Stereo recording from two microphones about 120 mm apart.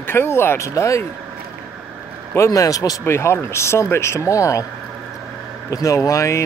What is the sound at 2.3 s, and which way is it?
Speech, 25° left (ahead or behind).